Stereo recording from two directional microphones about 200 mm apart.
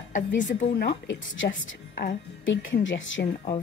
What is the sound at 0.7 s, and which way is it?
A woman's voice, 55° left (ahead or behind).